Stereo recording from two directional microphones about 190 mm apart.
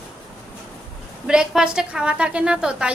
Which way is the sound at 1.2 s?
5° right (ahead or behind).